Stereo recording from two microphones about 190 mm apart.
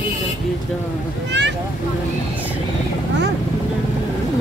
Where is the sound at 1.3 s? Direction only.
70° right (ahead or behind).